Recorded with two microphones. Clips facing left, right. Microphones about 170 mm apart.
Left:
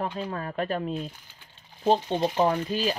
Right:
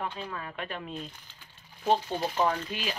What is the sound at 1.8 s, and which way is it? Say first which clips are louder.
Speech: left 4 dB; 30° left (ahead or behind).